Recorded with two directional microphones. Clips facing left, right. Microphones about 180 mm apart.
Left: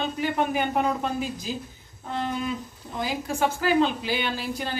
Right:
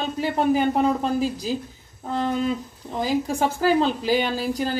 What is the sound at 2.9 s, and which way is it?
A woman's voice, 40° right (ahead or behind).